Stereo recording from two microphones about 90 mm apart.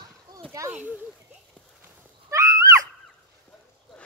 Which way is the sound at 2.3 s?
35° right (ahead or behind).